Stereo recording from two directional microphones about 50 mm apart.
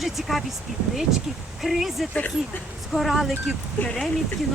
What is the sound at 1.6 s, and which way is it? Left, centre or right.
Speech, centre.